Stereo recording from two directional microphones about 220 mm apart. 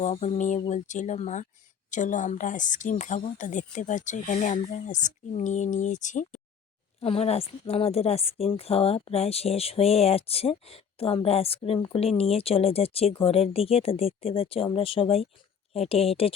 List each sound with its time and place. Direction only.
0.0 s a woman's voice: 30° left (ahead or behind)